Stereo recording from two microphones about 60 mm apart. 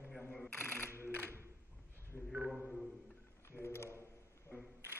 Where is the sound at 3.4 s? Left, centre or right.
Left.